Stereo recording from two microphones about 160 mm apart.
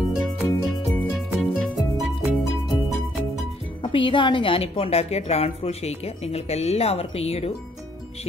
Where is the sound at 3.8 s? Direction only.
30° left (ahead or behind).